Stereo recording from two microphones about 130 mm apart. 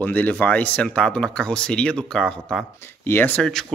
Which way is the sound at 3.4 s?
5° left (ahead or behind).